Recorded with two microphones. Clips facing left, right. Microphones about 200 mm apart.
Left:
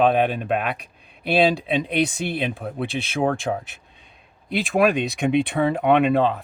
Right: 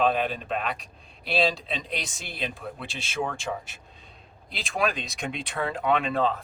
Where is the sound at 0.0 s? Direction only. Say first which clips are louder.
Left 6 dB; 60° left (ahead or behind).